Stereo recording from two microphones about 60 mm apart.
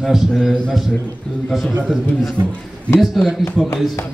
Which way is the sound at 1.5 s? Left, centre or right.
Centre.